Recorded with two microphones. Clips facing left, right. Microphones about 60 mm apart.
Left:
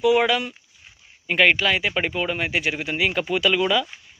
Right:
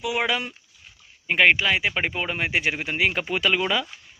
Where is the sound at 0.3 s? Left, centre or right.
Right.